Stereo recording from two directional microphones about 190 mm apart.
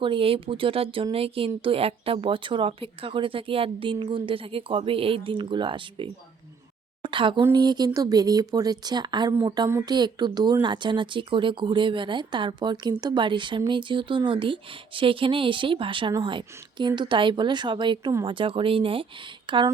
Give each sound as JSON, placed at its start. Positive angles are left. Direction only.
{"t": 0.0, "sound": "speech", "side_deg": -25}